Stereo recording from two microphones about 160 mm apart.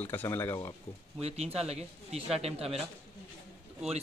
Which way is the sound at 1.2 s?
40° right (ahead or behind).